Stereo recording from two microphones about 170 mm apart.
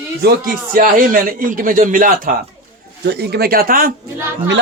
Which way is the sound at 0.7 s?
55° right (ahead or behind).